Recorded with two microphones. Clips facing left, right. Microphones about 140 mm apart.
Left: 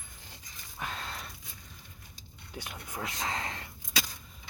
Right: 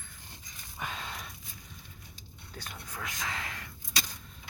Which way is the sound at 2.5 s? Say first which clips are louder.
Left 3 dB; 15° left (ahead or behind).